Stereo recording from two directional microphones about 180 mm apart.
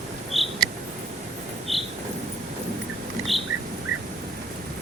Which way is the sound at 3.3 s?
Centre (ahead or behind).